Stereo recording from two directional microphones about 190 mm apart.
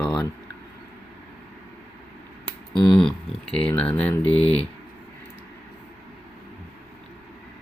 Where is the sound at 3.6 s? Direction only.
5° left (ahead or behind).